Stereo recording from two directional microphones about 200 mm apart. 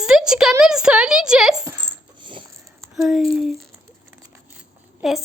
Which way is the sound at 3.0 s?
Centre (ahead or behind).